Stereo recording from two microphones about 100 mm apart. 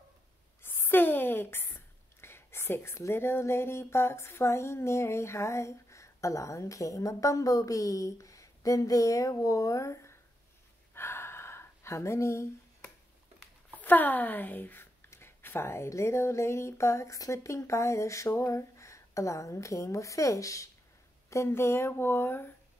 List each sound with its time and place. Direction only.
0.6 s a sound: 20° left (ahead or behind)
2.2 s speech: 25° left (ahead or behind)
11.0 s gasp: 25° left (ahead or behind)
13.7 s speech: 20° left (ahead or behind)